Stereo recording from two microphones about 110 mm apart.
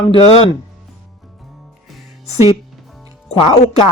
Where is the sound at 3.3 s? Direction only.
70° left (ahead or behind).